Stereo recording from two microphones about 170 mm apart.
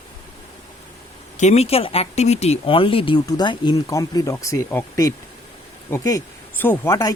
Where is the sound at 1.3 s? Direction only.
40° left (ahead or behind).